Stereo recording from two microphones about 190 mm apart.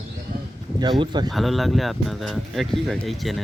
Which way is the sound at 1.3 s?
Centre (ahead or behind).